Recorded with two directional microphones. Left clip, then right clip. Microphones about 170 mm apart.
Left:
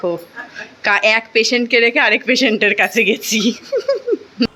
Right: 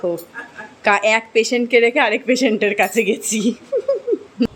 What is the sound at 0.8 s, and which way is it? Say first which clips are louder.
A woman's voice: left 1 dB; 10° right (ahead or behind).